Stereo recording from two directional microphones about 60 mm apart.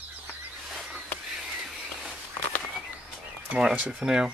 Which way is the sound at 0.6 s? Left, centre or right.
Centre.